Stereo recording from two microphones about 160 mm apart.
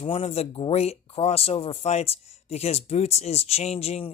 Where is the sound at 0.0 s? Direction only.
40° left (ahead or behind).